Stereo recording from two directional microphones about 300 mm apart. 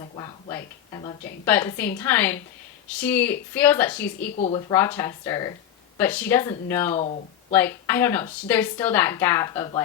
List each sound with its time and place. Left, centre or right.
0.0 s a woman's voice: centre
4.3 s speech: left
4.7 s a woman's voice: centre
6.9 s speech: left
7.5 s a woman's voice: centre